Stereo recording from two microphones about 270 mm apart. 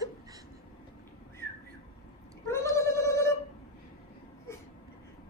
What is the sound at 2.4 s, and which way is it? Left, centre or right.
Gargling, centre.